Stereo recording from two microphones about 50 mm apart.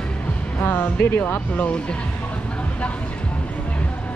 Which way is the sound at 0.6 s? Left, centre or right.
Left.